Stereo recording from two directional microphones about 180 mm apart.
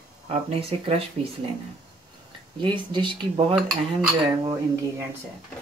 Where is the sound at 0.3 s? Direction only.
35° right (ahead or behind).